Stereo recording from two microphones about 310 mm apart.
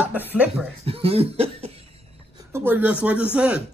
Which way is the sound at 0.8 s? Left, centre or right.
Centre.